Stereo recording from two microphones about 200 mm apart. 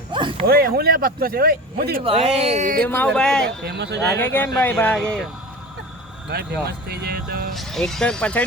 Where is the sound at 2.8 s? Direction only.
5° left (ahead or behind).